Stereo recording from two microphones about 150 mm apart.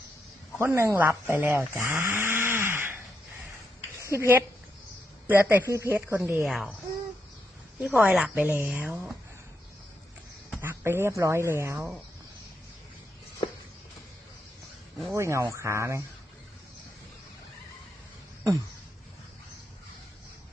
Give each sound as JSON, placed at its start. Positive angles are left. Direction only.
{"t": 0.6, "sound": "speech", "side_deg": -20}
{"t": 4.0, "sound": "speech", "side_deg": -20}
{"t": 6.4, "sound": "speech", "side_deg": -5}
{"t": 7.8, "sound": "speech", "side_deg": -10}
{"t": 10.6, "sound": "speech", "side_deg": -15}
{"t": 15.1, "sound": "speech", "side_deg": -20}